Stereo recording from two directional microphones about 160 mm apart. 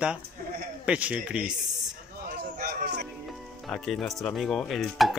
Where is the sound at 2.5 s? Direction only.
75° right (ahead or behind).